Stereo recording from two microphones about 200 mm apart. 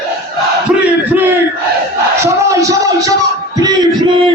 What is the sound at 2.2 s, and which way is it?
Music, 15° right (ahead or behind).